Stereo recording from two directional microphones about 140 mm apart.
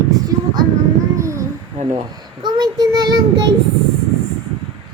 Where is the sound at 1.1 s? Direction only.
20° right (ahead or behind).